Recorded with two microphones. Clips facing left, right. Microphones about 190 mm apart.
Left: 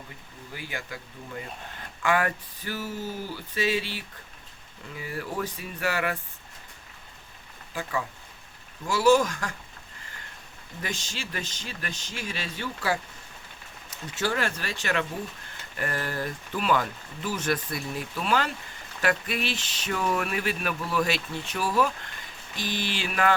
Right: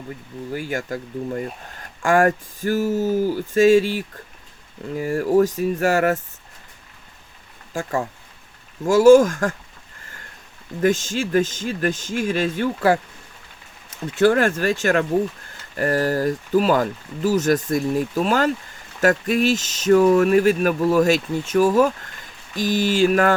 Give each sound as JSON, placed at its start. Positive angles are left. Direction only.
{"t": 0.5, "sound": "speech", "side_deg": -45}
{"t": 7.7, "sound": "speech", "side_deg": -45}
{"t": 10.8, "sound": "speech", "side_deg": -50}
{"t": 14.2, "sound": "speech", "side_deg": -50}